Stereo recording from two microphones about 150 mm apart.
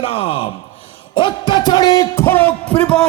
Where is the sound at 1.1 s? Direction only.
30° left (ahead or behind); by 3.0 s 5° left (ahead or behind).